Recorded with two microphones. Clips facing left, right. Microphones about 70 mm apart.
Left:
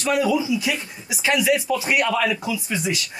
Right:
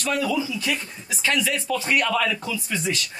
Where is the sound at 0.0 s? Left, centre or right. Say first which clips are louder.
Left 4 dB; centre.